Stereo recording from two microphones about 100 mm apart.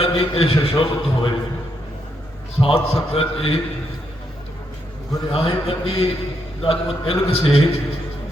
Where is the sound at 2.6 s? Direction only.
70° left (ahead or behind).